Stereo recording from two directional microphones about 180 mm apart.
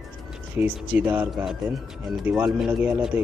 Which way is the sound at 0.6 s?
10° right (ahead or behind).